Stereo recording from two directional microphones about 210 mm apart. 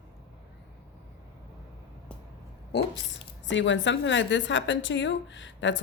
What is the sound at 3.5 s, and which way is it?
A woman's voice, 60° left (ahead or behind).